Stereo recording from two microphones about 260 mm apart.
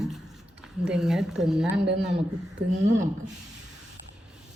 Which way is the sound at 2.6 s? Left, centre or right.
Right.